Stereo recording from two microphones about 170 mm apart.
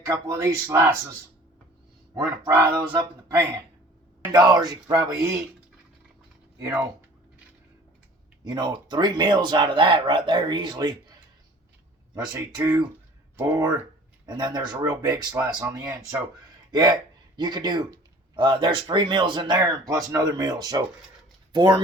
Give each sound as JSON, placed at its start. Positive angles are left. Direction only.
{"t": 0.1, "sound": "speech", "side_deg": -15}
{"t": 2.5, "sound": "speech", "side_deg": -10}
{"t": 4.3, "sound": "speech", "side_deg": -25}
{"t": 6.6, "sound": "speech", "side_deg": -20}
{"t": 8.4, "sound": "speech", "side_deg": -25}
{"t": 12.1, "sound": "speech", "side_deg": -20}